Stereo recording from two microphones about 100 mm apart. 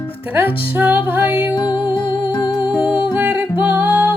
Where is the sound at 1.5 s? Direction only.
45° left (ahead or behind).